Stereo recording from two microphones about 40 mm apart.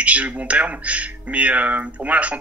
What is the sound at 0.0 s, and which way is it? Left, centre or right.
Speech, right.